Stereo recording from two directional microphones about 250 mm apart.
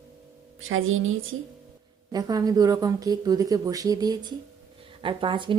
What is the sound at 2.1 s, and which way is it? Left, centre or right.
A woman's voice, centre.